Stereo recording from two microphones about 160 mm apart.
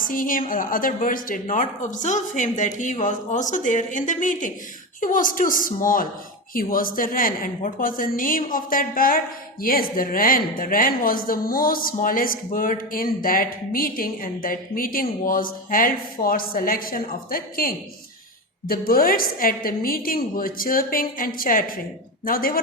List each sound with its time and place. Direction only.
0.0 s a woman's voice: 60° left (ahead or behind)